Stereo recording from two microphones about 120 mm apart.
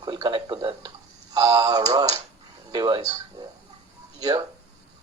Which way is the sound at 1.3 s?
30° right (ahead or behind).